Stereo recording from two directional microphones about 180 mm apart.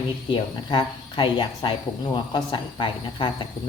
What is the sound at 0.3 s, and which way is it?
Speech, 30° left (ahead or behind).